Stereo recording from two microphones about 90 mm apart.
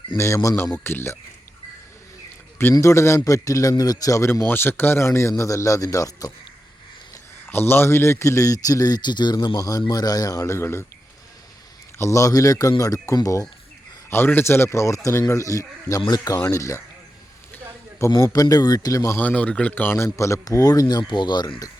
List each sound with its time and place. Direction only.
0.2 s speech: 35° left (ahead or behind)
2.7 s speech: 35° left (ahead or behind)
4.4 s speech: 25° left (ahead or behind); by 6.3 s 40° left (ahead or behind)
7.4 s speech: 25° left (ahead or behind); by 9.6 s 55° left (ahead or behind)
9.6 s a man's voice: 40° left (ahead or behind)
10.4 s speech: 30° left (ahead or behind)
11.9 s speech: 35° left (ahead or behind)
14.1 s speech: 25° left (ahead or behind)
16.0 s a man's voice: 50° left (ahead or behind)
16.5 s speech: 35° left (ahead or behind)
18.1 s a man's voice: 40° left (ahead or behind)
19.1 s a man's voice: 15° left (ahead or behind)
20.1 s a man's voice: 35° left (ahead or behind); by 21.7 s 55° left (ahead or behind)